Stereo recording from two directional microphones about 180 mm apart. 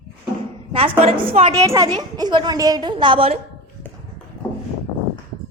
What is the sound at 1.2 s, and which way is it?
Speech, 30° right (ahead or behind).